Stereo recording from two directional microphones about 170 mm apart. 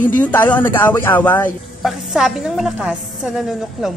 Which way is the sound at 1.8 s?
Centre (ahead or behind).